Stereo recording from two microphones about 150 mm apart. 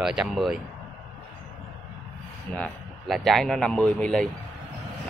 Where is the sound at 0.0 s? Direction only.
5° right (ahead or behind).